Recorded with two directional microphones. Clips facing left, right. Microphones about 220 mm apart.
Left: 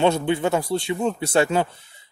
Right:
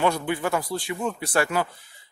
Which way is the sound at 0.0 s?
25° left (ahead or behind).